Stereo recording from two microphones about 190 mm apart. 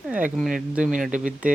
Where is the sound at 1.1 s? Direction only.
40° right (ahead or behind).